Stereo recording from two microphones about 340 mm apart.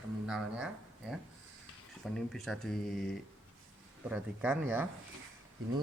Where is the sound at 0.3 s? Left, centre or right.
Centre.